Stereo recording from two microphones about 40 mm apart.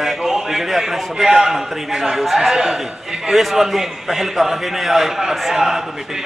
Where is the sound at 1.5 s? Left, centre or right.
Centre.